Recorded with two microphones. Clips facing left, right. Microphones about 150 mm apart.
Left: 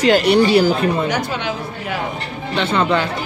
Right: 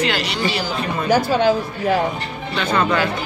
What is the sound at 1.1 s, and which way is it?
Speech, 40° right (ahead or behind).